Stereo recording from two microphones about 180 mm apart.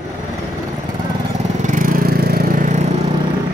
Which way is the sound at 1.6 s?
50° right (ahead or behind).